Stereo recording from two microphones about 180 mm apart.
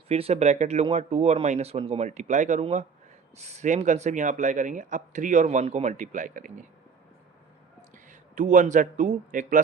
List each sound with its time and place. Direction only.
0.1 s speech: 35° right (ahead or behind)
7.9 s speech: 45° right (ahead or behind)